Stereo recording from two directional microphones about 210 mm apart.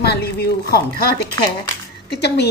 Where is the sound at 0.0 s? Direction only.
50° left (ahead or behind).